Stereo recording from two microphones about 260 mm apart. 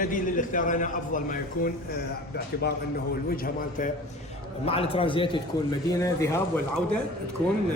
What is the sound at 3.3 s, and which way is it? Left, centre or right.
Speech, left.